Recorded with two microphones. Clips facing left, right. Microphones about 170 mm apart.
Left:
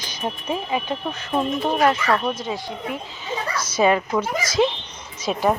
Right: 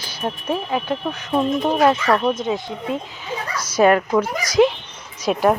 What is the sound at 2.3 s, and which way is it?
Speech, 20° right (ahead or behind).